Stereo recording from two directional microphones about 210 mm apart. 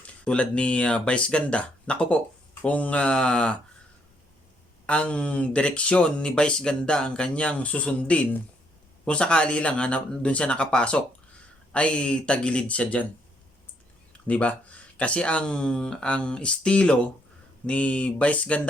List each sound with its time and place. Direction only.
0.0 s speech: 5° left (ahead or behind)
4.9 s speech: 5° left (ahead or behind)
14.1 s speech: 5° left (ahead or behind)